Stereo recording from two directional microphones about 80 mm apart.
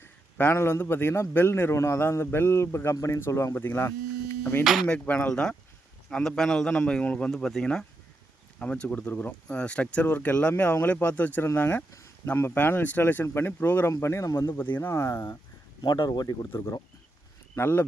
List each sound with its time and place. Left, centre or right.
0.0 s a man's voice: left
4.6 s speech: centre
4.9 s a man's voice: centre; by 14.3 s left
14.3 s speech: left
14.8 s a man's voice: left
15.8 s speech: left
16.5 s a man's voice: left